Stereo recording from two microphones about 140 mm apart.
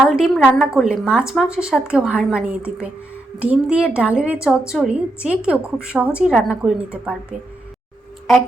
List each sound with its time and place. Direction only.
0.1 s a woman's voice: 5° right (ahead or behind)